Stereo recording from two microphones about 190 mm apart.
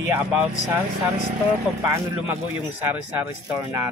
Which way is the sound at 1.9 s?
15° right (ahead or behind).